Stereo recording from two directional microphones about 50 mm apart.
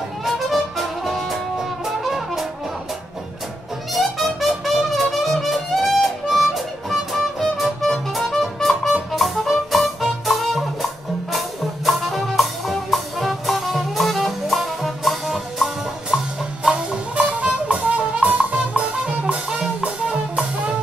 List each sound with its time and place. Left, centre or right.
0.2 s music: centre
3.9 s music: centre
17.1 s music: right